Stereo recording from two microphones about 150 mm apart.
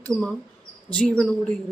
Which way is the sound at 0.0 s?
5° left (ahead or behind).